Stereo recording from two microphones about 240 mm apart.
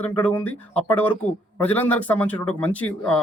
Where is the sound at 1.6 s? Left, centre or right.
Centre.